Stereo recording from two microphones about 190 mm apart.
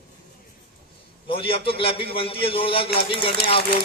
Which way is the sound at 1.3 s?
30° left (ahead or behind).